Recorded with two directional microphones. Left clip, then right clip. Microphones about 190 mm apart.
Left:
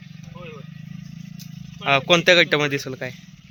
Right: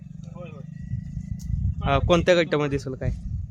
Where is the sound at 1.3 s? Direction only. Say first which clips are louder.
Right 2 dB; 65° right (ahead or behind).